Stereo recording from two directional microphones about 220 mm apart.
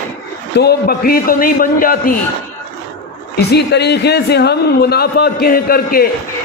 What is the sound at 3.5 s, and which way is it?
A man's voice, 50° left (ahead or behind).